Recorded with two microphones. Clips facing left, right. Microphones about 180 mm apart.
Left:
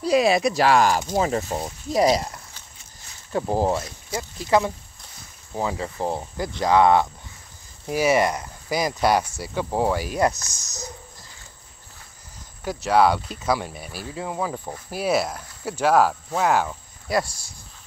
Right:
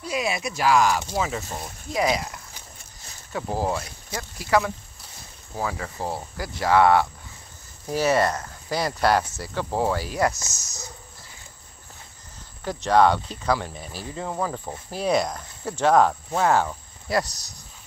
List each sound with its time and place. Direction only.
0.0 s speech: 35° left (ahead or behind)
3.3 s speech: 25° left (ahead or behind)
12.6 s speech: 10° left (ahead or behind)
17.1 s speech: 25° left (ahead or behind)